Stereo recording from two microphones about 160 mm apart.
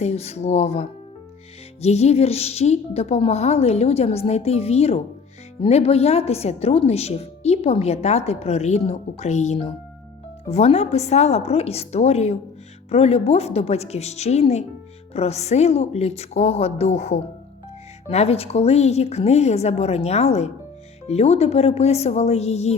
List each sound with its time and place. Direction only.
0.0 s a woman's voice: 40° left (ahead or behind)